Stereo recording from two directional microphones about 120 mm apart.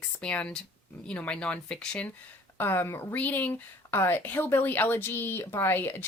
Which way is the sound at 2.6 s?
20° left (ahead or behind).